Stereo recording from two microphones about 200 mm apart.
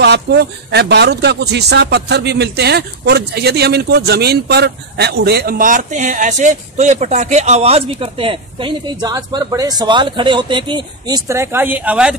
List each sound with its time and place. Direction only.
0.0 s speech: 55° right (ahead or behind); by 12.2 s 5° right (ahead or behind)